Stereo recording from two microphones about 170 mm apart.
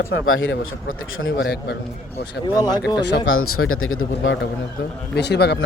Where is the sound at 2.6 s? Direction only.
25° left (ahead or behind).